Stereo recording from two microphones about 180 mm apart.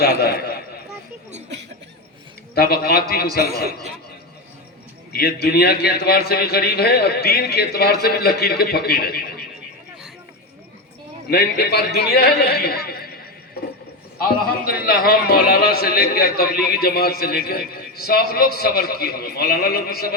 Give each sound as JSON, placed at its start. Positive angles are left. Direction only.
{"t": 0.0, "sound": "a sound", "side_deg": 60}
{"t": 2.6, "sound": "a man's voice", "side_deg": 60}
{"t": 5.1, "sound": "a man's voice", "side_deg": 60}
{"t": 11.3, "sound": "a man's voice", "side_deg": 60}
{"t": 14.2, "sound": "a man's voice", "side_deg": 55}